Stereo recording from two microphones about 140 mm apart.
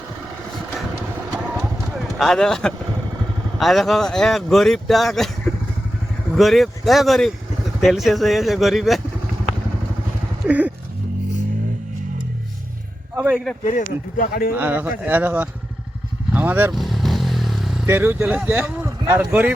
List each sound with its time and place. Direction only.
2.1 s speech: centre (ahead or behind)
6.3 s speech: centre (ahead or behind)
10.4 s a sound: 10° right (ahead or behind)
13.1 s a sound: 10° right (ahead or behind)
13.7 s speech: 70° left (ahead or behind); by 14.5 s 85° left
14.5 s speech: 10° right (ahead or behind)
16.3 s vehicle: 15° right (ahead or behind)
16.7 s motorcycle: centre (ahead or behind)
17.8 s speech: 15° right (ahead or behind)